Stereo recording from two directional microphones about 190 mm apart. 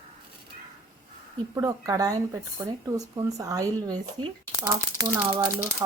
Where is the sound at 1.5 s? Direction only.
15° right (ahead or behind).